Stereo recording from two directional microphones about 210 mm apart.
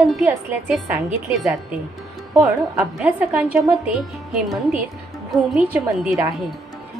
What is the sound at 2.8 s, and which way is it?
A woman's voice, 5° right (ahead or behind).